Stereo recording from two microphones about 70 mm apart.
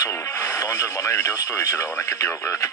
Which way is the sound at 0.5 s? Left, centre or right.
Left.